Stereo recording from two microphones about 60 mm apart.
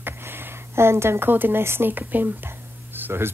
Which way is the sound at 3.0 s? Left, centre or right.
Right.